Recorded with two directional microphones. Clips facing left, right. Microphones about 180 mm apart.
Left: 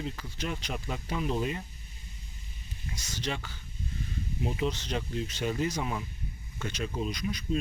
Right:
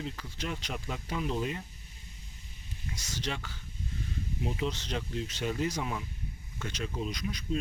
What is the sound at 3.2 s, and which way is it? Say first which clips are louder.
Speech: left 2 dB; centre (ahead or behind).